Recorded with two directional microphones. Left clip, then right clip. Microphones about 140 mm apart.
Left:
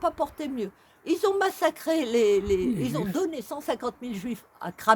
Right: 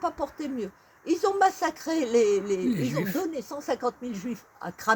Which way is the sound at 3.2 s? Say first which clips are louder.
Left 2 dB; 15° left (ahead or behind).